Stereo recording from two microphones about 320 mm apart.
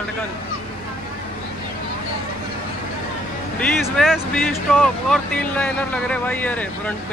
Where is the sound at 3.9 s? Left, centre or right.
Centre.